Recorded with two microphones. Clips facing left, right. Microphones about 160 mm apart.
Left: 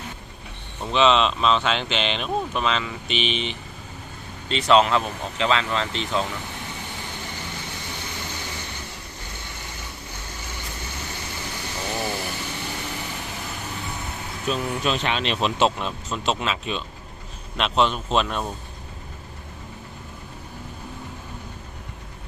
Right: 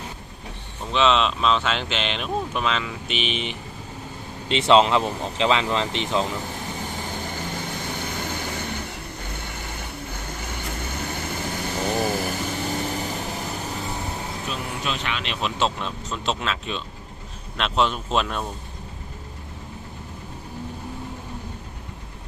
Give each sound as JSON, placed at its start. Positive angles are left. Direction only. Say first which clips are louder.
{"t": 0.9, "sound": "speech", "louder": "left 1 dB", "side_deg": 0}
{"t": 4.4, "sound": "speech", "louder": "right 1 dB", "side_deg": -20}
{"t": 7.1, "sound": "vehicle", "louder": "right 4 dB", "side_deg": -45}
{"t": 10.8, "sound": "vehicle", "louder": "right 6 dB", "side_deg": -50}
{"t": 14.8, "sound": "speech", "louder": "left 5 dB", "side_deg": 30}
{"t": 15.5, "sound": "speech", "louder": "left 3 dB", "side_deg": 10}